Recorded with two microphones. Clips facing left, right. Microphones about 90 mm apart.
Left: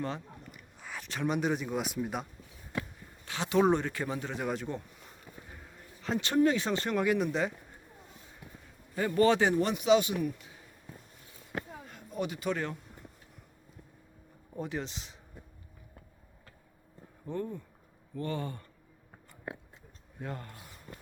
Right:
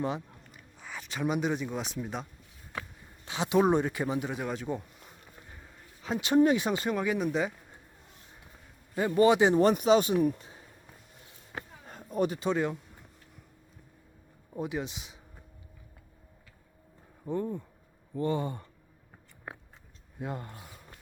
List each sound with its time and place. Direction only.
0.8 s speech: centre (ahead or behind)
3.2 s speech: 20° right (ahead or behind)
4.4 s speech: centre (ahead or behind)
9.0 s speech: 20° right (ahead or behind)
9.6 s speech: 40° right (ahead or behind)
11.9 s a sound: 40° right (ahead or behind)
12.4 s speech: 20° right (ahead or behind)
14.5 s speech: 10° right (ahead or behind)
17.2 s speech: 15° right (ahead or behind)
20.2 s speech: 15° right (ahead or behind)